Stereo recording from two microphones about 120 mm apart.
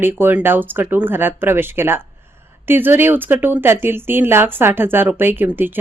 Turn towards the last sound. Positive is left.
turn(degrees=-15)  # may be behind; listen again after turning